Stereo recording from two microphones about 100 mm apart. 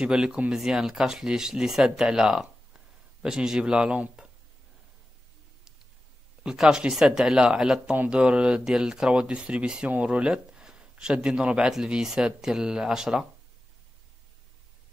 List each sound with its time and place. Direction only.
0.0 s speech: 10° right (ahead or behind)
6.4 s speech: 5° right (ahead or behind)